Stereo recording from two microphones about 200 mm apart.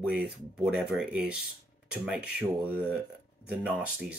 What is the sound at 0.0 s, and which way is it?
Speech, 5° right (ahead or behind).